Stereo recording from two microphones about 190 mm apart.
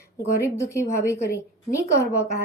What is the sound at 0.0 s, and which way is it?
A woman's voice, 15° left (ahead or behind).